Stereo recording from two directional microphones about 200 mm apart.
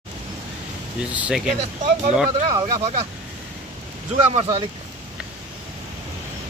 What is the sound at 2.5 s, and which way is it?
Speech, 30° right (ahead or behind).